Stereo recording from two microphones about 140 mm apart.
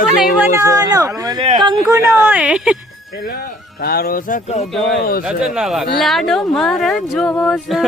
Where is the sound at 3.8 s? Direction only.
90° left.